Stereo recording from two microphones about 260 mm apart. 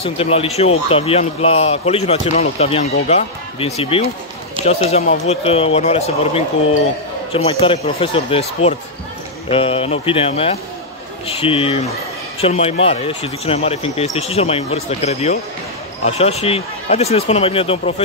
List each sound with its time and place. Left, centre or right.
0.0 s a man's voice: left